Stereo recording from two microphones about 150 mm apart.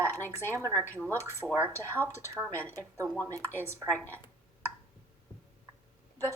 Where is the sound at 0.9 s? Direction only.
10° left (ahead or behind).